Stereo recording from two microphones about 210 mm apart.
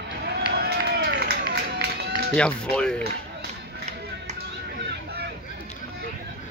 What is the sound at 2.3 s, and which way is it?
Speech, 5° left (ahead or behind).